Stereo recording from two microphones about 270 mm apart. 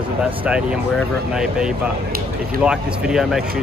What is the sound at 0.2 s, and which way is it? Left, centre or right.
Speech, centre.